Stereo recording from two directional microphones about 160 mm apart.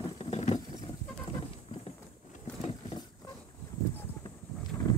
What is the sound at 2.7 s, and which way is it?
Wild animals, 35° left (ahead or behind).